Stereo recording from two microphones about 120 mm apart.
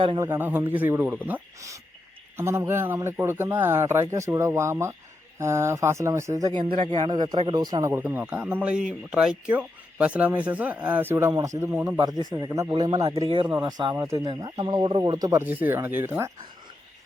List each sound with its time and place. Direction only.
0.2 s speech: 20° right (ahead or behind)
6.6 s speech: 45° right (ahead or behind)
7.1 s speech: 35° right (ahead or behind)
13.3 s speech: 45° right (ahead or behind)
13.9 s speech: 25° right (ahead or behind)
14.3 s speech: 35° right (ahead or behind)
15.2 s speech: 25° right (ahead or behind)